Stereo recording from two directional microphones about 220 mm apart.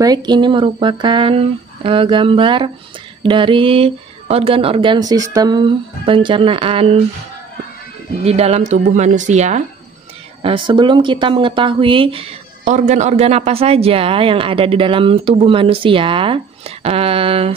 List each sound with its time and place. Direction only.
0.0 s speech: 20° right (ahead or behind)
8.3 s speech: 30° right (ahead or behind)